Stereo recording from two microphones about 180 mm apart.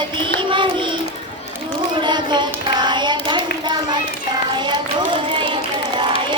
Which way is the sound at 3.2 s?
25° right (ahead or behind).